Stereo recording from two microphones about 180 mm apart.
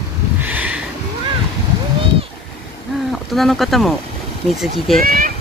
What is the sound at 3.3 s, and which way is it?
Speech, centre (ahead or behind).